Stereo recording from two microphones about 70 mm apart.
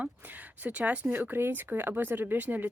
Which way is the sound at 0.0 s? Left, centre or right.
Right.